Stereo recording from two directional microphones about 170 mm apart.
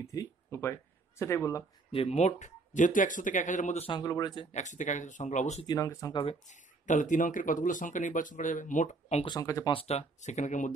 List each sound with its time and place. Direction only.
0.0 s speech: 15° left (ahead or behind)
1.9 s speech: 35° left (ahead or behind)
3.9 s speech: 25° left (ahead or behind)
4.5 s speech: 45° left (ahead or behind)
5.7 s speech: 20° left (ahead or behind)
6.4 s speech: 45° left (ahead or behind)
9.2 s speech: 20° left (ahead or behind)
9.7 s speech: 35° left (ahead or behind)